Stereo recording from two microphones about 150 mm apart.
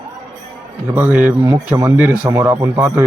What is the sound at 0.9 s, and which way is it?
A man's voice, 10° right (ahead or behind).